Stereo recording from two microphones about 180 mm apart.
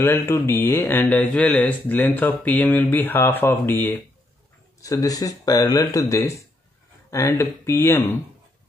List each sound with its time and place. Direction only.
0.0 s speech: 15° left (ahead or behind)